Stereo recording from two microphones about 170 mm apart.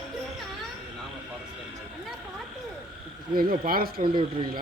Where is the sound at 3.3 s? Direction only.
60° right (ahead or behind).